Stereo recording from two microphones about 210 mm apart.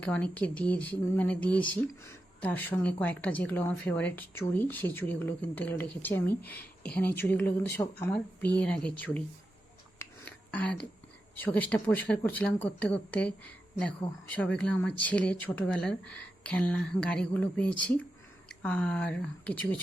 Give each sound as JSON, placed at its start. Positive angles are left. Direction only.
{"t": 0.0, "sound": "speech", "side_deg": 5}
{"t": 6.2, "sound": "speech", "side_deg": 45}
{"t": 6.6, "sound": "speech", "side_deg": 5}
{"t": 10.2, "sound": "a sound", "side_deg": 5}
{"t": 11.3, "sound": "speech", "side_deg": 10}